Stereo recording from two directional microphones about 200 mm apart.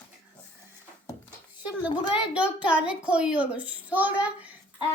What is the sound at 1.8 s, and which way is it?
A woman's voice, 5° right (ahead or behind).